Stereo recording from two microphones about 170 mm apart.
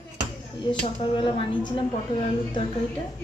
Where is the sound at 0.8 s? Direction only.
30° left (ahead or behind).